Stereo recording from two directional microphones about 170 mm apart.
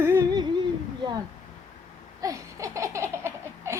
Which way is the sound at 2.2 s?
20° right (ahead or behind).